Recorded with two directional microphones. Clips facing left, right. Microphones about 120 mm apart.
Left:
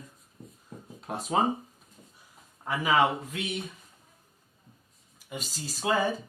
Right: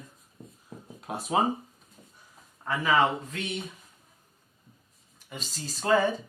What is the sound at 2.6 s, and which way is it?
Speech, 15° left (ahead or behind).